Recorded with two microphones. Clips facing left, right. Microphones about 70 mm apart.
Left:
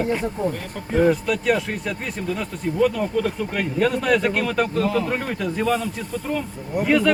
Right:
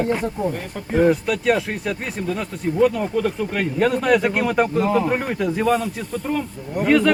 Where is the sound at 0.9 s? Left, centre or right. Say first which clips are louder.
Right 1 dB; centre.